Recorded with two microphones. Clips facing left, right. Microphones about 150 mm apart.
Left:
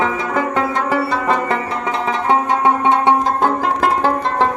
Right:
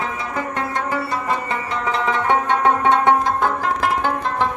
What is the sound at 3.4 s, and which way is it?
Music, 40° left (ahead or behind).